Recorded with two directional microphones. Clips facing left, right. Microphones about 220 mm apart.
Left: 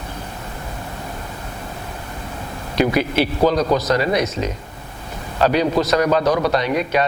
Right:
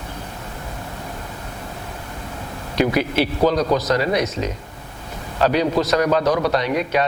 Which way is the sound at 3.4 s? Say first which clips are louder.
Left 1 dB; 25° left (ahead or behind).